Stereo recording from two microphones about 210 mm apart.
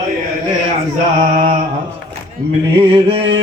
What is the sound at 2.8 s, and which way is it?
Mantra, 25° right (ahead or behind).